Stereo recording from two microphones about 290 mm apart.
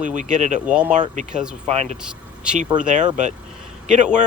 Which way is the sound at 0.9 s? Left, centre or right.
Right.